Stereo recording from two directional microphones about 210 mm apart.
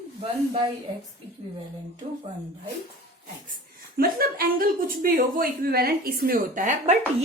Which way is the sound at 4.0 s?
45° right (ahead or behind).